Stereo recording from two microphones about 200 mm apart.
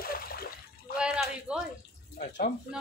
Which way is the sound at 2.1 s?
40° left (ahead or behind).